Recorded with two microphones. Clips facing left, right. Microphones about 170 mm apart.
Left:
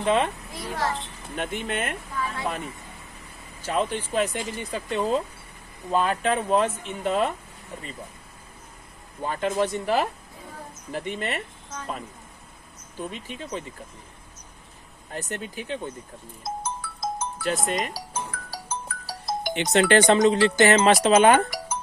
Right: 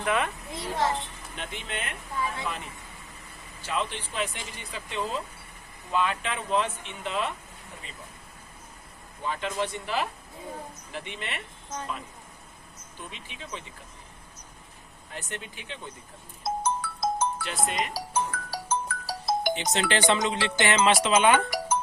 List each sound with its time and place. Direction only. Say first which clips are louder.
0.0 s a child's voice: left 5 dB; 30° left (ahead or behind)
0.5 s a child's voice: right 1 dB; 20° right (ahead or behind)
1.4 s speech: left 8 dB; 50° left (ahead or behind)
3.6 s speech: left 6 dB; 45° left (ahead or behind)
9.2 s speech: left 5 dB; 45° left (ahead or behind)
13.0 s speech: left 9 dB; 45° left (ahead or behind)
15.1 s speech: left 6 dB; 40° left (ahead or behind)
16.4 s music: right 4 dB; 60° right (ahead or behind)
17.4 s speech: left 4 dB; 45° left (ahead or behind)
17.9 s music: right 4 dB; 60° right (ahead or behind)
19.5 s speech: left 8 dB; 65° left (ahead or behind)
20.0 s speech: left 7 dB; 40° left (ahead or behind)